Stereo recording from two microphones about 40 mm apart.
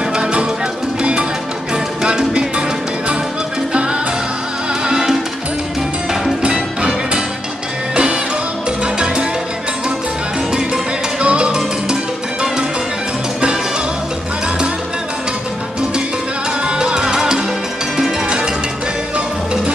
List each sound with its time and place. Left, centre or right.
0.1 s music: right
4.8 s music: centre
6.4 s music: right
7.9 s music: right
8.8 s salsa music: right
11.1 s music: right
16.6 s music: right